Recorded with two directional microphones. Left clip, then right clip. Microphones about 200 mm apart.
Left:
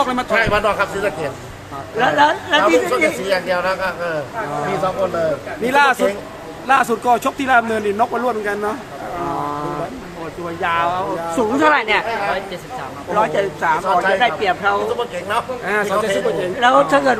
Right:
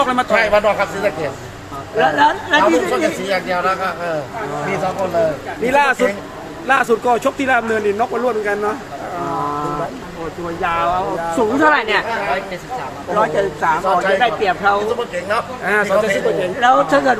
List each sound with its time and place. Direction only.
0.0 s speech: 5° left (ahead or behind)
2.0 s speech: centre (ahead or behind)
3.2 s speech: 20° left (ahead or behind)
5.6 s speech: 15° left (ahead or behind)
10.6 s speech: centre (ahead or behind)
13.1 s speech: 5° left (ahead or behind)